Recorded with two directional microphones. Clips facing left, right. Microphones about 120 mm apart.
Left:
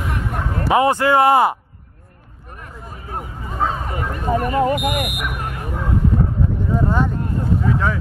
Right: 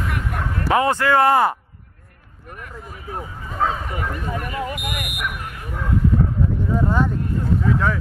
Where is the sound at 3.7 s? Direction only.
40° left (ahead or behind).